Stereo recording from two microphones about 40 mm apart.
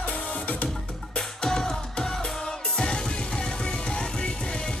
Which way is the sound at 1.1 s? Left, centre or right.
Centre.